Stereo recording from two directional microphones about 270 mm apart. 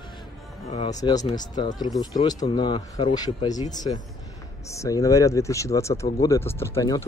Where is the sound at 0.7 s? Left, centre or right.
Left.